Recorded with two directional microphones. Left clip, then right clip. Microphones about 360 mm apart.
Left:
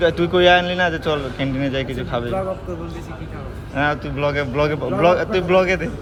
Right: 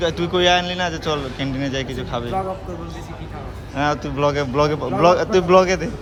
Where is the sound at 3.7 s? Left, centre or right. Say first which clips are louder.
Even; centre.